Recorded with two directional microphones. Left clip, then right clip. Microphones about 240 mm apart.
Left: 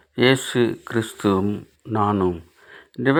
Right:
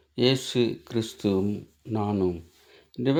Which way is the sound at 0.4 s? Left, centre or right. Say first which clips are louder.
Left 5 dB; centre.